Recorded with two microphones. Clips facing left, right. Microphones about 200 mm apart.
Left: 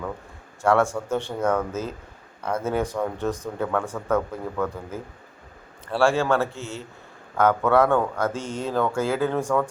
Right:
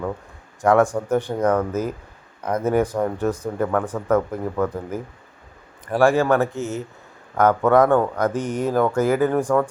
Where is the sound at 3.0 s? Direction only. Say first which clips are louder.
Right 4 dB; 10° right (ahead or behind).